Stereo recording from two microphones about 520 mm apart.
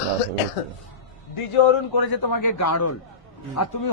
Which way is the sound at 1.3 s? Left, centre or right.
Left.